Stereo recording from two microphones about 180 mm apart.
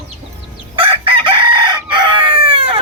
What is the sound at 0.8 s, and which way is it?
Chicken, 30° right (ahead or behind).